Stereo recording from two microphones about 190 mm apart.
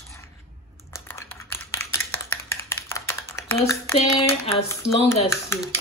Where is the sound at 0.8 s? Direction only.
15° left (ahead or behind).